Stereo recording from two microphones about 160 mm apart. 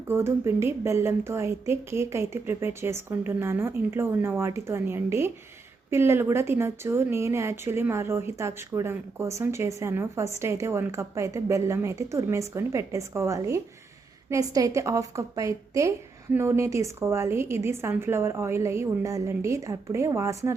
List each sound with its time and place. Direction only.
0.1 s a woman's voice: 15° right (ahead or behind)